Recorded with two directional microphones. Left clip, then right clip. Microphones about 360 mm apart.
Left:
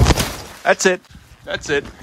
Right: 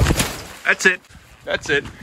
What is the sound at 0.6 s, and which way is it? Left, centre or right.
A man's voice, centre.